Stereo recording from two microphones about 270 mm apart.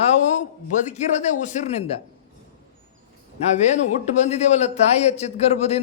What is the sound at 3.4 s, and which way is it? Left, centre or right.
Speech, left.